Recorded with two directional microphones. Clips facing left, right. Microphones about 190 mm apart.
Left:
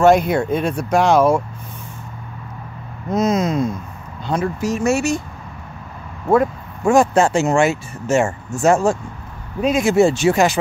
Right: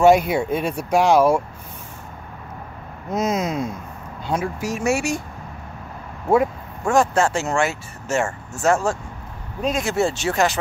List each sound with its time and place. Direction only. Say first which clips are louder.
0.0 s speech: left 1 dB; 10° right (ahead or behind)
3.1 s speech: left 4 dB; 10° right (ahead or behind)
6.2 s speech: left 2 dB; 10° right (ahead or behind)
6.9 s speech: left 4 dB; 15° left (ahead or behind)